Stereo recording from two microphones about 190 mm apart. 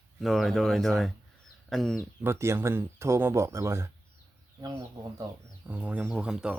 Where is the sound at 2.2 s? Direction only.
15° right (ahead or behind).